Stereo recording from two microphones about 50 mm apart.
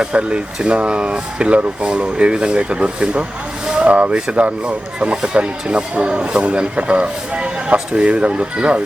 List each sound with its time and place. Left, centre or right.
0.0 s speech: centre